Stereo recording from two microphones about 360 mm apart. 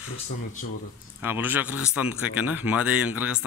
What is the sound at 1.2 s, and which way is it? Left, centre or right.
Speech, centre.